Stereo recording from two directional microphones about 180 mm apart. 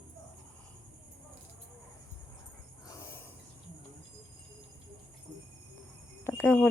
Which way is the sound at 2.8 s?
20° left (ahead or behind).